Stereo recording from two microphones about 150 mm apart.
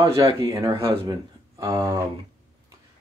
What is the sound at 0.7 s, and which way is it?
Speech, 35° right (ahead or behind).